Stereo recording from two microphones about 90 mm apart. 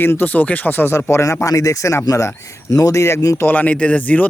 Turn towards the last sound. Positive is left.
turn(degrees=15)  # may be behind; listen again after turning